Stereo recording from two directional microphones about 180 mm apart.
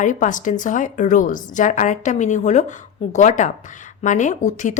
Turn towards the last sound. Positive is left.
turn(degrees=45)  # may be behind; listen again after turning